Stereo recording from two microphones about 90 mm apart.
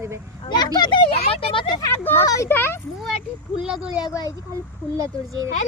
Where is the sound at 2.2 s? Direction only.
40° left (ahead or behind).